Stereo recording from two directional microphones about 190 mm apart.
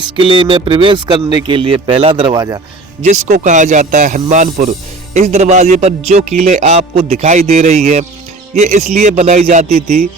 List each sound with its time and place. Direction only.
0.0 s speech: 25° right (ahead or behind)
3.0 s speech: 40° right (ahead or behind)